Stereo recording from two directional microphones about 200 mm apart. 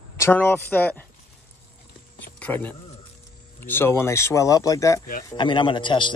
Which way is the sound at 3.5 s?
10° left (ahead or behind).